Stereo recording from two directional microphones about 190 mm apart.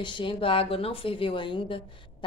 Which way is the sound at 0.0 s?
25° left (ahead or behind).